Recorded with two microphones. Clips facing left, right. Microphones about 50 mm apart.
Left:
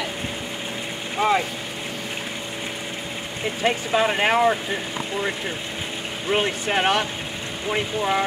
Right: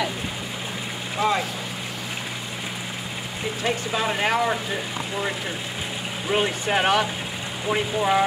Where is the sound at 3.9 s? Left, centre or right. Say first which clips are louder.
Left 4 dB; left.